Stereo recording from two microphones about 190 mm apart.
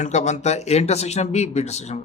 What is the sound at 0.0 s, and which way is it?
Speech, 40° left (ahead or behind).